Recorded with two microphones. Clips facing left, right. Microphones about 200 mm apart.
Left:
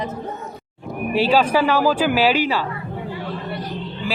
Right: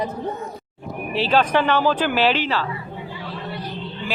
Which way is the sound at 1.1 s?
10° left (ahead or behind).